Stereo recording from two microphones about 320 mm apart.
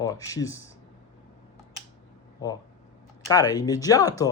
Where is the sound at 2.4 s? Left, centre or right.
Centre.